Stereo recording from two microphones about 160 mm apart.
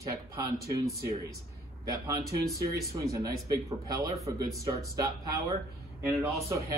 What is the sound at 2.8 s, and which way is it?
A man's voice, 20° right (ahead or behind).